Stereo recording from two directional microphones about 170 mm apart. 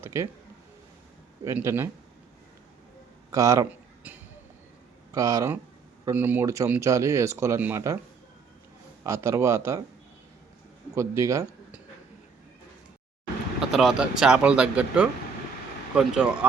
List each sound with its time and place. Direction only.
0.0 s speech: 15° right (ahead or behind)
1.5 s speech: 15° right (ahead or behind)
3.3 s speech: 20° right (ahead or behind)
9.0 s speech: 15° right (ahead or behind)
10.9 s speech: 15° right (ahead or behind)
13.6 s vehicle: centre (ahead or behind)
14.2 s speech: 5° right (ahead or behind)